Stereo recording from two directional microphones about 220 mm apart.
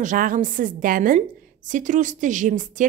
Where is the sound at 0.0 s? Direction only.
35° right (ahead or behind).